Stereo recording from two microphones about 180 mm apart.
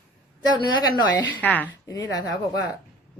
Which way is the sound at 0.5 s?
25° left (ahead or behind).